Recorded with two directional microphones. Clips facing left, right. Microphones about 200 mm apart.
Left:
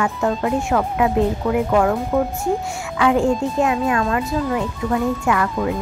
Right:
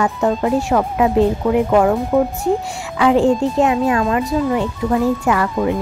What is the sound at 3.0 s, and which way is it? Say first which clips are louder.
Speech: right 4 dB; 25° right (ahead or behind).